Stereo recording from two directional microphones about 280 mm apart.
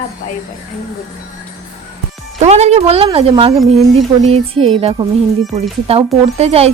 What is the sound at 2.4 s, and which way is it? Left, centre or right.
Speech, right.